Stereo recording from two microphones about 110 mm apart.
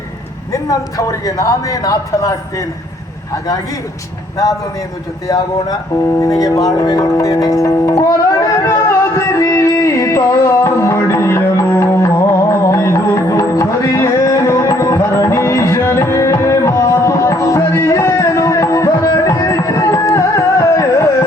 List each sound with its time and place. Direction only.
0.5 s a man's voice: 30° left (ahead or behind)
5.3 s a man's voice: 35° left (ahead or behind)
6.0 s music: 30° left (ahead or behind)